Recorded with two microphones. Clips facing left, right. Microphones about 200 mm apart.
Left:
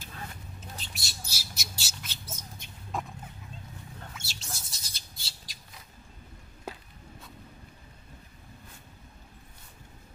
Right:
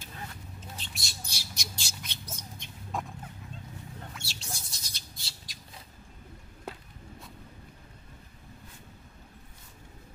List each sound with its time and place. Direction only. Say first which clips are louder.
0.6 s squawk: right 1 dB; centre (ahead or behind)
4.1 s bird: right 1 dB; centre (ahead or behind)